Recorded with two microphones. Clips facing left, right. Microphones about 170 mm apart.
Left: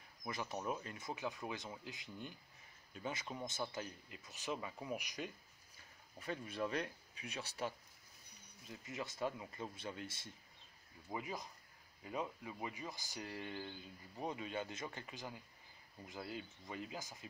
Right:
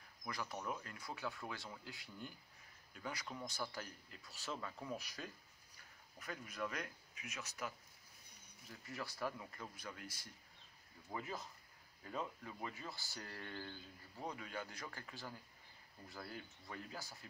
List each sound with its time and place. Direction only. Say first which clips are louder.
0.2 s speech: left 2 dB; 20° left (ahead or behind)
6.1 s speech: left 5 dB; 30° left (ahead or behind)
8.6 s speech: left 2 dB; 20° left (ahead or behind)
11.1 s speech: left 2 dB; 15° left (ahead or behind)